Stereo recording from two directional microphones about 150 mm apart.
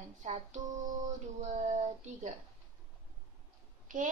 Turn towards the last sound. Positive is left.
turn(degrees=-60)  # may be behind; listen again after turning